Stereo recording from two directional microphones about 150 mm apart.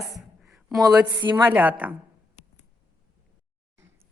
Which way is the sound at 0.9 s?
25° right (ahead or behind).